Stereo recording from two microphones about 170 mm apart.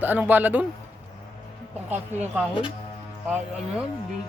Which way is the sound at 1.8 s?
10° right (ahead or behind).